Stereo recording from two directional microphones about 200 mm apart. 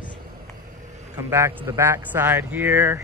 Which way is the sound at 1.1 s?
10° right (ahead or behind).